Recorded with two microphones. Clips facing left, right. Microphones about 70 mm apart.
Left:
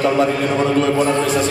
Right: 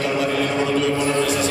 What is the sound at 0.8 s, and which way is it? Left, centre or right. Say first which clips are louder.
Speech: left 3 dB; left.